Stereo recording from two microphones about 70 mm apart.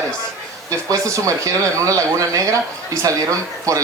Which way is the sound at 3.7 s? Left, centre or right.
Right.